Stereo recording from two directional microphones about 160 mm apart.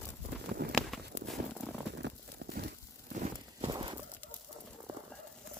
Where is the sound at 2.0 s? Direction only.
90° right.